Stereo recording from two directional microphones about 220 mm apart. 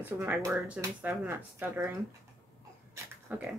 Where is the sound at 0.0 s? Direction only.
10° right (ahead or behind).